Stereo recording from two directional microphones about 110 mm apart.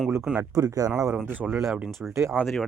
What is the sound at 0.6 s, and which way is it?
Speech, 35° right (ahead or behind).